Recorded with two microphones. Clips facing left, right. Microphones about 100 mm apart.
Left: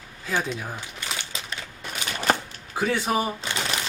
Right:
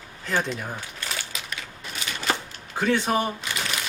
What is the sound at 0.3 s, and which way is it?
Speech, 10° left (ahead or behind).